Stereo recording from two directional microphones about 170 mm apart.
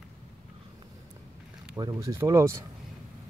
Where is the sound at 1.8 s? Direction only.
25° right (ahead or behind).